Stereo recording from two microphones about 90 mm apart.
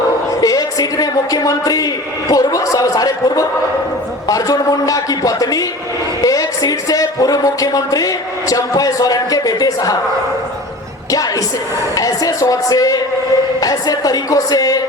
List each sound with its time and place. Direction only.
0.4 s a man's voice: 45° left (ahead or behind)
11.1 s a man's voice: 40° left (ahead or behind)